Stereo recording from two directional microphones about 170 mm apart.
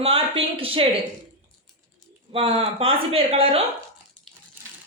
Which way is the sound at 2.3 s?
35° right (ahead or behind).